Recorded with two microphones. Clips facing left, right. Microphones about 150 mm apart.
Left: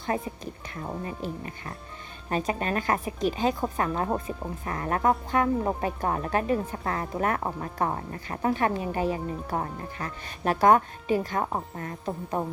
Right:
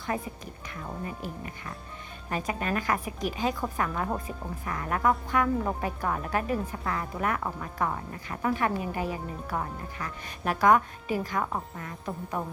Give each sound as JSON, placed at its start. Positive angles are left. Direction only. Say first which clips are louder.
{"t": 0.1, "sound": "speech", "louder": "left 3 dB", "side_deg": 25}
{"t": 6.8, "sound": "speech", "louder": "left 2 dB", "side_deg": 40}
{"t": 12.0, "sound": "speech", "louder": "left 3 dB", "side_deg": 25}